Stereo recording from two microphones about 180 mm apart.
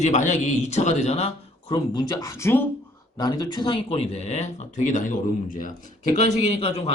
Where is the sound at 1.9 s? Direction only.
20° left (ahead or behind); by 5.7 s 50° left (ahead or behind).